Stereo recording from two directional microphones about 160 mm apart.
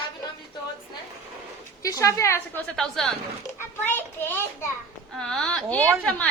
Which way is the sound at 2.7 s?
5° left (ahead or behind).